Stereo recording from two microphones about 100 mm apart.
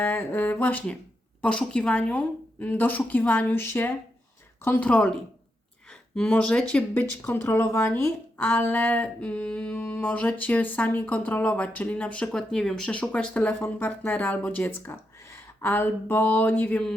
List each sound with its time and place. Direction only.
0.0 s speech: 25° left (ahead or behind)
6.9 s speech: 20° left (ahead or behind)